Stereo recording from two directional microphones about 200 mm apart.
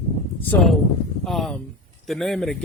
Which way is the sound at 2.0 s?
Centre (ahead or behind).